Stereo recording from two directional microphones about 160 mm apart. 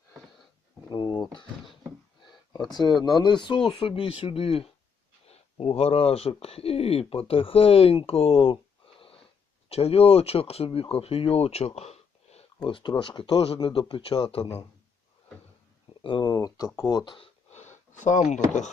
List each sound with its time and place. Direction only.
0.9 s speech: 30° left (ahead or behind)
2.7 s speech: 25° left (ahead or behind)
9.6 s speech: 40° left (ahead or behind)
12.5 s speech: 30° left (ahead or behind)
16.0 s speech: 30° left (ahead or behind)
17.5 s speech: 45° left (ahead or behind)